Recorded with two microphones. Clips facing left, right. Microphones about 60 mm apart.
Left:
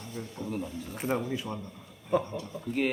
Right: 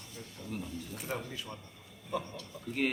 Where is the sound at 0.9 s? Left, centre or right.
Left.